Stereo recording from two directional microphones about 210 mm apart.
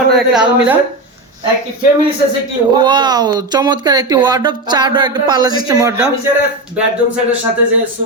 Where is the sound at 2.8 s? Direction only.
20° right (ahead or behind).